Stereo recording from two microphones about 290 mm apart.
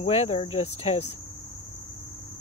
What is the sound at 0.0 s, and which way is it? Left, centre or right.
Speech, left.